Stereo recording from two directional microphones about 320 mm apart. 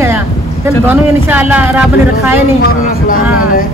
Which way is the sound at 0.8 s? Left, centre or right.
Centre.